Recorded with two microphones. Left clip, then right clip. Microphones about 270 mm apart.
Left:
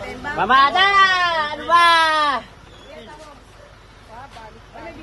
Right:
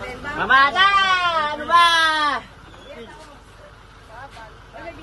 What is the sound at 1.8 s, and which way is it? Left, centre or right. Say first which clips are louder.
Speech: left 3 dB; left.